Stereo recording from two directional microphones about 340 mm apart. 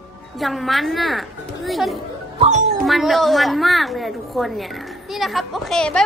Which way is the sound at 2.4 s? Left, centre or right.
Centre.